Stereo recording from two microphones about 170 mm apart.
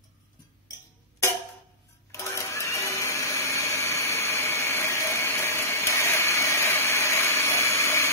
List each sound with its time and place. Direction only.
2.1 s blender: 15° left (ahead or behind)